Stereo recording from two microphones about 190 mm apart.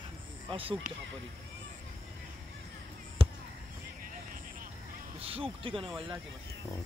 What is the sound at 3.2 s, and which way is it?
Basketball bounce, 30° right (ahead or behind).